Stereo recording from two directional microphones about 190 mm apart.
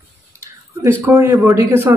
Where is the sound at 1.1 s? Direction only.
10° right (ahead or behind).